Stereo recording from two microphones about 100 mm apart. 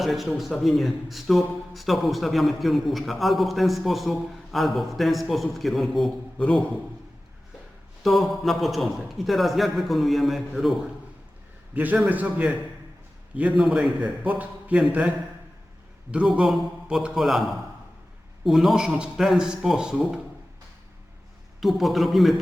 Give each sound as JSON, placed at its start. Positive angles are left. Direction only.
{"t": 0.0, "sound": "a man's voice", "side_deg": 0}
{"t": 8.0, "sound": "a man's voice", "side_deg": 0}
{"t": 11.7, "sound": "a man's voice", "side_deg": -15}
{"t": 13.6, "sound": "a man's voice", "side_deg": -5}
{"t": 14.0, "sound": "a man's voice", "side_deg": -15}
{"t": 16.1, "sound": "a man's voice", "side_deg": -5}
{"t": 21.6, "sound": "a man's voice", "side_deg": 0}